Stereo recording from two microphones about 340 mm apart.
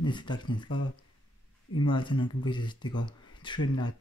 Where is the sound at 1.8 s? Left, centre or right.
Centre.